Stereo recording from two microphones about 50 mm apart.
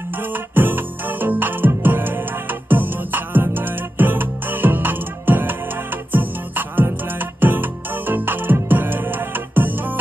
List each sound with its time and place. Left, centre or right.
0.3 s music: right